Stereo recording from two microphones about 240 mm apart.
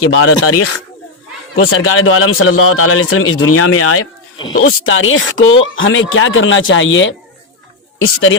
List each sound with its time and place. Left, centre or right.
0.0 s speech: left
1.5 s a man's voice: left